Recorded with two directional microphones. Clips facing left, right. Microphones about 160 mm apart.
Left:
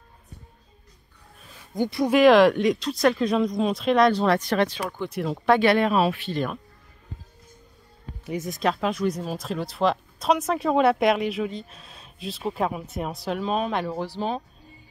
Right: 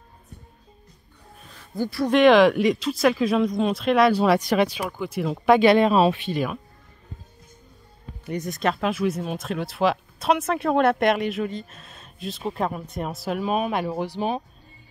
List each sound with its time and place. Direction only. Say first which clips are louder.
1.8 s speech: left 1 dB; 20° left (ahead or behind)
2.0 s speech: even; centre (ahead or behind)
5.5 s speech: right 3 dB; 15° right (ahead or behind)
8.3 s speech: even; centre (ahead or behind); by 14.4 s 15° right (ahead or behind)